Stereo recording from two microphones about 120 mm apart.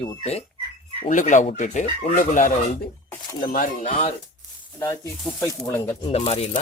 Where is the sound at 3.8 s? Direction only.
90° left.